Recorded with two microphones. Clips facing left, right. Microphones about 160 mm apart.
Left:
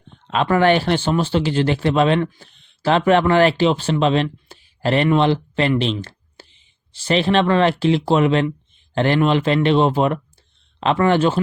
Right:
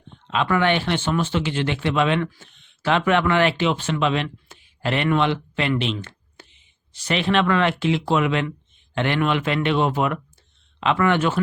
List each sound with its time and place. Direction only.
0.3 s speech: 40° left (ahead or behind)